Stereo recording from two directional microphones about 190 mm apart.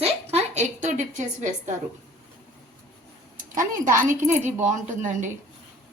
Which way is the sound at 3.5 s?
45° right (ahead or behind).